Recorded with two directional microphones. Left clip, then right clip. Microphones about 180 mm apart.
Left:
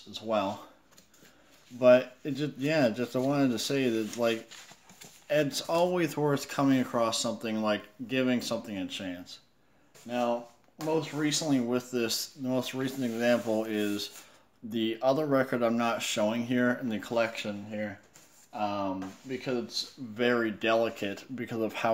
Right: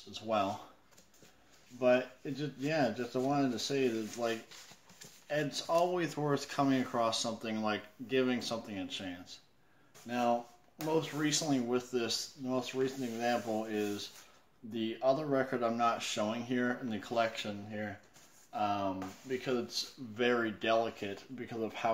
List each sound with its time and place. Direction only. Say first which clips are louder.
0.1 s speech: left 3 dB; 20° left (ahead or behind)
1.8 s speech: left 8 dB; 45° left (ahead or behind)
10.0 s speech: left 2 dB; 15° left (ahead or behind); by 17.5 s 35° left (ahead or behind)
18.5 s speech: left 2 dB; 20° left (ahead or behind)
20.2 s speech: left 4 dB; 30° left (ahead or behind); by 21.9 s 50° left (ahead or behind)